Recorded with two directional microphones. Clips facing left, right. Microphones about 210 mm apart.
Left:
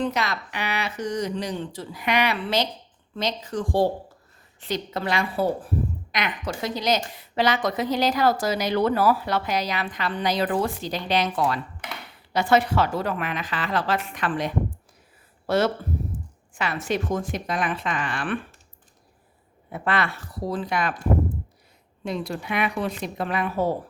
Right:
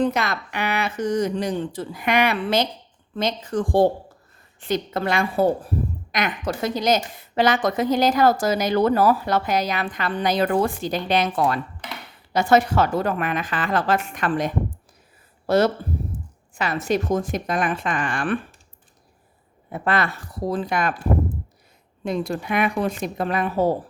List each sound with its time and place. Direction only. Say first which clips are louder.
0.0 s a woman's voice: right 4 dB; 50° right (ahead or behind)
19.7 s a woman's voice: right 3 dB; 40° right (ahead or behind)
22.0 s a woman's voice: right 4 dB; 50° right (ahead or behind)